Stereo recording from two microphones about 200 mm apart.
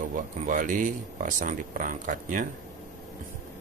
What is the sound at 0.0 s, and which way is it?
Speech, 40° right (ahead or behind).